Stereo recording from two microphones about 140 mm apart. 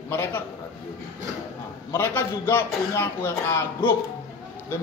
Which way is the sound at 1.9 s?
20° left (ahead or behind).